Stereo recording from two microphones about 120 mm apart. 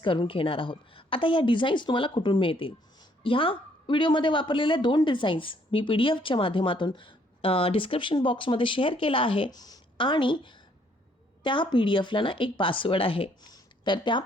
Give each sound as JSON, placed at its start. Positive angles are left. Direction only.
{"t": 0.0, "sound": "a woman's voice", "side_deg": 45}
{"t": 13.4, "sound": "speech", "side_deg": 40}